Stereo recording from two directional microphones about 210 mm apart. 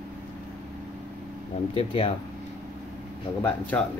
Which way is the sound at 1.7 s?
25° left (ahead or behind).